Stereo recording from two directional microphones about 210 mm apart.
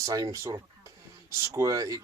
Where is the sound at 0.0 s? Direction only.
15° right (ahead or behind).